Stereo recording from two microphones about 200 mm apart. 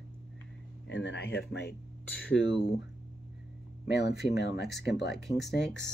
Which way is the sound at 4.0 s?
55° left (ahead or behind).